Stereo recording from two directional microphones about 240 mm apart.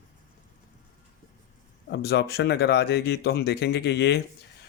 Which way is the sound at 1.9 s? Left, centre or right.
Left.